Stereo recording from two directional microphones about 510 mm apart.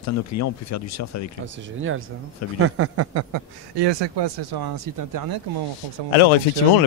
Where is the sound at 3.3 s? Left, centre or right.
Right.